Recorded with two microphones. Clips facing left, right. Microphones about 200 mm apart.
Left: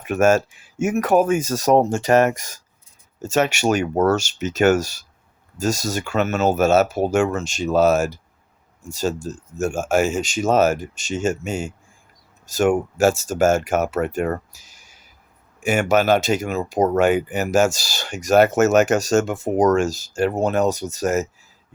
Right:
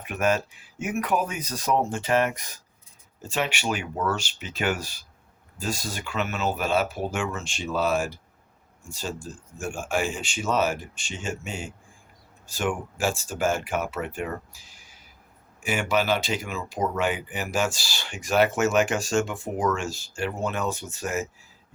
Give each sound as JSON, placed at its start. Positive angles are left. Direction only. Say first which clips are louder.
{"t": 0.0, "sound": "speech", "louder": "left 8 dB", "side_deg": 45}